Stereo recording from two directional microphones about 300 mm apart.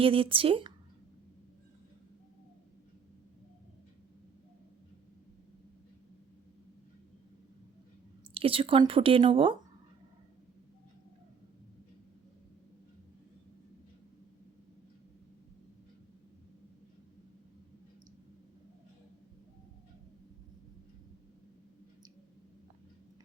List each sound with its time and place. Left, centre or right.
0.0 s speech: centre
8.3 s speech: centre